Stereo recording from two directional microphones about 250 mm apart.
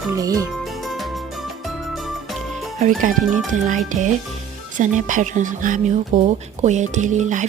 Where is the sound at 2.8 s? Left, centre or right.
Right.